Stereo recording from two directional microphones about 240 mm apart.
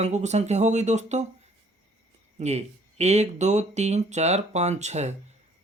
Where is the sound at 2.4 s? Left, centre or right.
Right.